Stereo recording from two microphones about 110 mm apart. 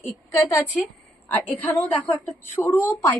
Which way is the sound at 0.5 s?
15° left (ahead or behind).